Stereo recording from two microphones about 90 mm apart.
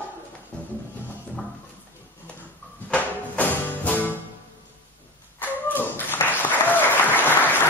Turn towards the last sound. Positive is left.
turn(degrees=20)  # may be behind; listen again after turning